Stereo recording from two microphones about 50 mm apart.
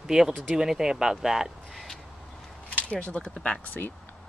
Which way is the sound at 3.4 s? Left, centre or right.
Left.